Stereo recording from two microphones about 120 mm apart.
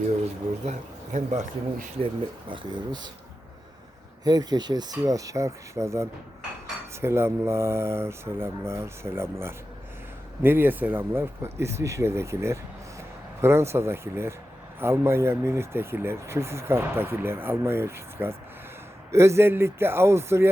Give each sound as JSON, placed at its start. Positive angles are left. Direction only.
{"t": 0.6, "sound": "speech", "side_deg": -75}
{"t": 2.5, "sound": "speech", "side_deg": -35}
{"t": 4.2, "sound": "speech", "side_deg": -35}